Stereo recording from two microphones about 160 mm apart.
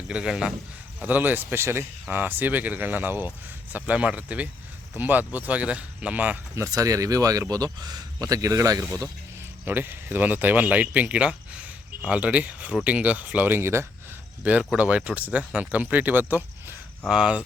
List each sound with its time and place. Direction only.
0.1 s a man's voice: 5° right (ahead or behind)
6.7 s speech: 20° right (ahead or behind)
14.4 s speech: 5° right (ahead or behind)